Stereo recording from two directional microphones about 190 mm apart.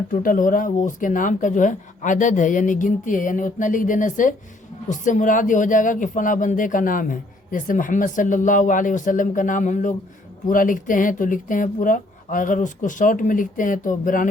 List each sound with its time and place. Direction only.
0.1 s speech: 45° left (ahead or behind)